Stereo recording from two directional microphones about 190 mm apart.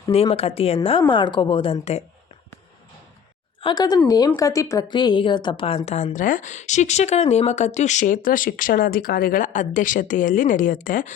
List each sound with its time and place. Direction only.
0.3 s a woman's voice: 30° left (ahead or behind)
3.6 s a woman's voice: 25° left (ahead or behind); by 11.1 s 45° left (ahead or behind)